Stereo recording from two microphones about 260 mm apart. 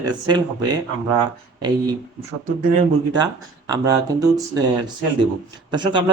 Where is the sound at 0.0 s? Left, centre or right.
Centre.